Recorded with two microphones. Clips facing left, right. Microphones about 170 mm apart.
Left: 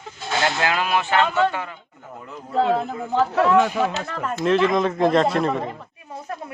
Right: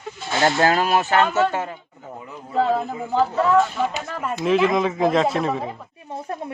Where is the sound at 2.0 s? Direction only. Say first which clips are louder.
Right 1 dB; 10° right (ahead or behind).